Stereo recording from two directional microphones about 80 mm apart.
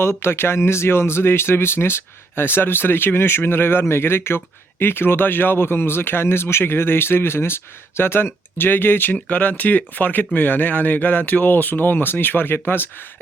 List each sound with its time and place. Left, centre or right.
0.0 s speech: left